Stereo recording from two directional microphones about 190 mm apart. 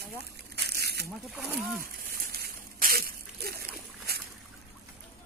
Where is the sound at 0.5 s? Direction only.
55° right (ahead or behind).